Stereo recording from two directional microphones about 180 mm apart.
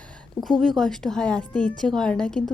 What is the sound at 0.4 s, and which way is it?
A woman's voice, centre (ahead or behind).